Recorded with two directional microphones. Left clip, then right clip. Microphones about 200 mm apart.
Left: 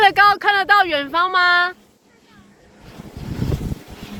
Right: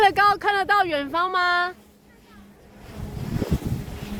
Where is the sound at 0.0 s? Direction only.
15° right (ahead or behind).